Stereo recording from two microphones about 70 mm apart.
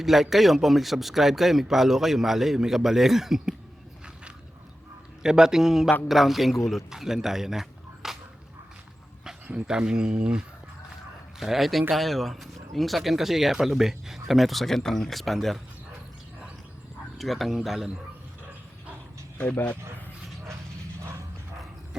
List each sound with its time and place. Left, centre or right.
0.0 s a man's voice: centre
5.2 s a man's voice: centre
9.2 s a man's voice: centre
17.2 s a man's voice: centre
19.4 s speech: left